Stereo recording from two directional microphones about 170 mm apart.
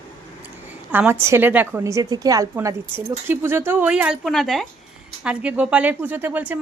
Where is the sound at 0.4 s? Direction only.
10° right (ahead or behind).